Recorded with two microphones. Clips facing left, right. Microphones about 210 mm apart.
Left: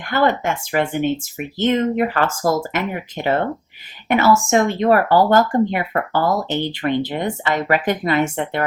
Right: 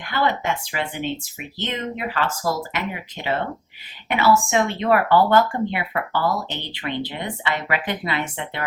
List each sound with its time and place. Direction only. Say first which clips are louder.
0.0 s speech: left 5 dB; 50° left (ahead or behind)